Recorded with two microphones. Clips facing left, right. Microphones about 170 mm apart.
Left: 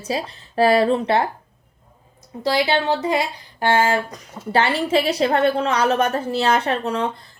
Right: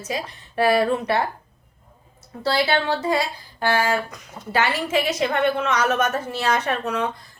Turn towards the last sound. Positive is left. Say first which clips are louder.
# left 3 dB
turn(degrees=30)  # may be behind; listen again after turning